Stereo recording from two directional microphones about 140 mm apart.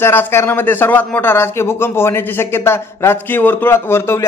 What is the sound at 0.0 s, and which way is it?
A man's voice, 15° left (ahead or behind).